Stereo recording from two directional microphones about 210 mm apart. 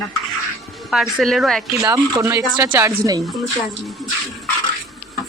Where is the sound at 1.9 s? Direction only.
15° right (ahead or behind).